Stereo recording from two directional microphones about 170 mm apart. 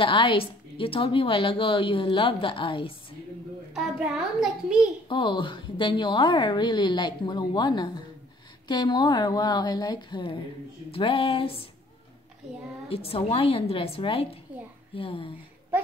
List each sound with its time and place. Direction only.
0.0 s a woman's voice: 30° left (ahead or behind)
3.7 s a child's voice: 5° right (ahead or behind)
5.0 s a woman's voice: 30° left (ahead or behind)
12.9 s a woman's voice: 35° left (ahead or behind)